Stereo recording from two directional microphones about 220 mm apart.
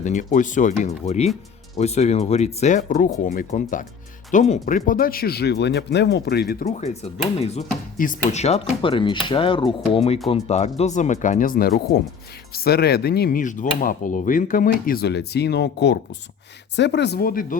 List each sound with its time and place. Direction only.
0.0 s speech: 35° left (ahead or behind)
6.7 s speech: 30° left (ahead or behind)